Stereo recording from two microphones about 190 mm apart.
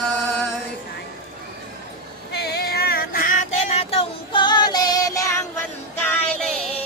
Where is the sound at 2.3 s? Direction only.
60° left (ahead or behind); by 5.4 s 15° left (ahead or behind).